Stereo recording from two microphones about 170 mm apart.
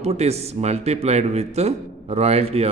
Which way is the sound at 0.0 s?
40° right (ahead or behind).